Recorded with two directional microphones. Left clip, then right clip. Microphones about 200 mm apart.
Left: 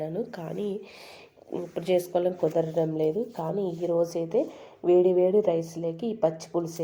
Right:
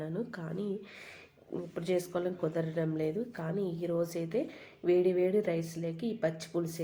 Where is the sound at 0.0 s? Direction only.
30° left (ahead or behind).